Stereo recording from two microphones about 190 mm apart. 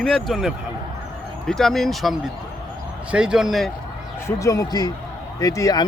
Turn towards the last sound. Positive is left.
turn(degrees=20)  # may be behind; listen again after turning